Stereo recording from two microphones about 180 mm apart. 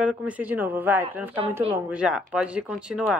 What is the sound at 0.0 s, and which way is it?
A woman's voice, 5° right (ahead or behind).